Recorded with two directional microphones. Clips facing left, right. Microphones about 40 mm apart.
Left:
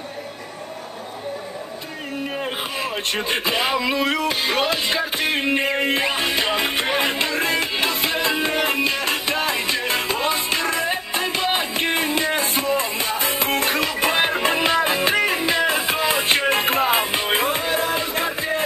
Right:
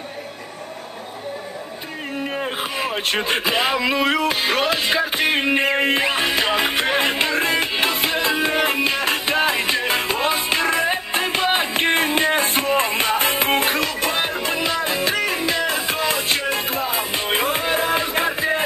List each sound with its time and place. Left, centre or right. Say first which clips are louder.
3.1 s music: right 2 dB; right
5.9 s music: right 2 dB; centre
6.4 s music: right 2 dB; centre
6.7 s music: right 2 dB; centre; by 13.7 s right
13.9 s music: left 2 dB; centre
16.3 s music: left 3 dB; left
17.1 s music: even; centre
17.6 s music: right 2 dB; centre